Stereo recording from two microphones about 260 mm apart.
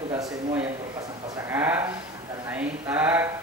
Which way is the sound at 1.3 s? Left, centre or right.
Centre.